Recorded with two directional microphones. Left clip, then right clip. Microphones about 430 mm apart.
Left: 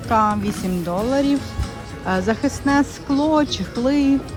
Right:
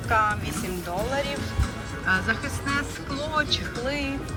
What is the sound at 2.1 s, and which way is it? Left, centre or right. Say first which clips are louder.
Speech: left 4 dB; centre.